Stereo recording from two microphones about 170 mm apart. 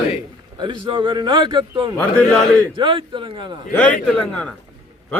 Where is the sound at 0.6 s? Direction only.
25° right (ahead or behind).